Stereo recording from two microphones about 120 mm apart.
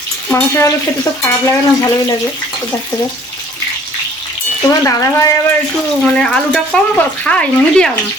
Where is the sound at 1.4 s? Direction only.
30° left (ahead or behind).